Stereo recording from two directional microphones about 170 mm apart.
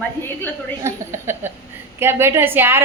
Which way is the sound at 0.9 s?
15° right (ahead or behind).